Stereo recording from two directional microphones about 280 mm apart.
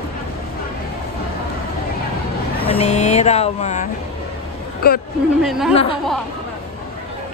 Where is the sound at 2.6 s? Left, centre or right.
Left.